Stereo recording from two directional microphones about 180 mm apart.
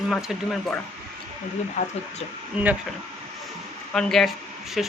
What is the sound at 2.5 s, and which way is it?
Speech, 5° right (ahead or behind).